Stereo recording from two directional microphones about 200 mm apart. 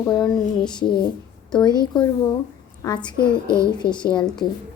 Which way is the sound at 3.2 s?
25° left (ahead or behind).